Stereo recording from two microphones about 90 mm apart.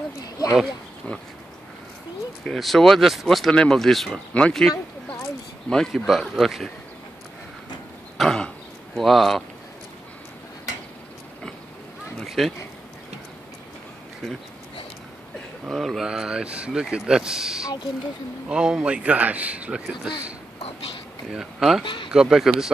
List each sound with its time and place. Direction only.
0.2 s a sound: 40° left (ahead or behind)
2.4 s speech: 5° left (ahead or behind)
8.2 s throat clearing: 5° left (ahead or behind)
8.9 s speech: centre (ahead or behind)
12.2 s speech: centre (ahead or behind)
15.7 s a man's voice: centre (ahead or behind)
21.3 s a man's voice: 5° right (ahead or behind)